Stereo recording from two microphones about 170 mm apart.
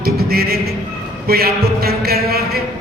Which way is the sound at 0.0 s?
65° right (ahead or behind).